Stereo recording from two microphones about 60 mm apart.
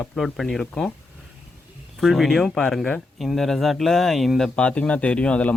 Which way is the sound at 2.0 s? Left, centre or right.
Centre.